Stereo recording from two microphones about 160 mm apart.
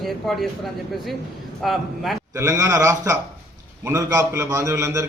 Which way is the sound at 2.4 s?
20° right (ahead or behind).